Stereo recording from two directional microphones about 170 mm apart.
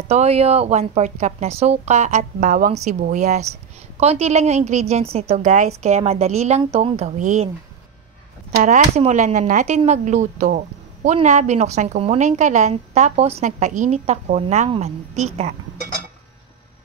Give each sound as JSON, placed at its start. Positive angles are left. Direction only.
{"t": 0.1, "sound": "a woman's voice", "side_deg": -40}
{"t": 8.5, "sound": "a woman's voice", "side_deg": -45}